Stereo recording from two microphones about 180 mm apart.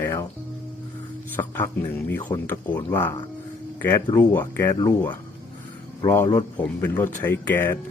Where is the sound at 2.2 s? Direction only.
20° left (ahead or behind).